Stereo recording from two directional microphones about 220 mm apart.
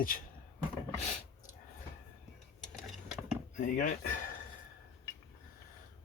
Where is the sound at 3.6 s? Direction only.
35° left (ahead or behind).